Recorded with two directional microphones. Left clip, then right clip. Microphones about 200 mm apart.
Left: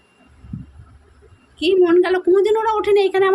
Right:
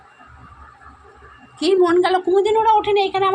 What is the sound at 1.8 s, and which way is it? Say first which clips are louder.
A woman's voice: left 2 dB; 25° left (ahead or behind).